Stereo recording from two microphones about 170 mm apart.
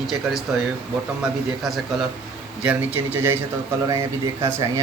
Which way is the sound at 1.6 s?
Centre (ahead or behind).